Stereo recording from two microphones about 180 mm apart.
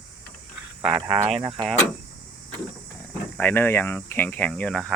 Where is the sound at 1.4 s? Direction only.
25° right (ahead or behind).